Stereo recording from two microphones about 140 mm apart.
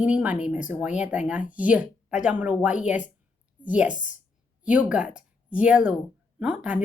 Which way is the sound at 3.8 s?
65° left (ahead or behind).